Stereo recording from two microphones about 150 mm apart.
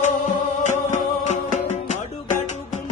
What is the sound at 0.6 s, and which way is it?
Music, 55° left (ahead or behind).